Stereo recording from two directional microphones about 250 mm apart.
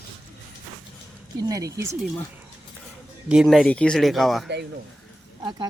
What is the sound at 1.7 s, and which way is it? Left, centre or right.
Speech, centre.